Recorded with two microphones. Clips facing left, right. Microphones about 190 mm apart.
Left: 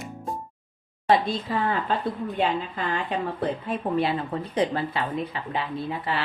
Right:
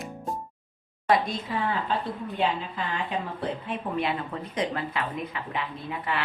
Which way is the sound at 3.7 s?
35° left (ahead or behind).